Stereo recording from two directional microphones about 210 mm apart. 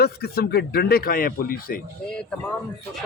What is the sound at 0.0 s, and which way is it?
Speech, 50° left (ahead or behind).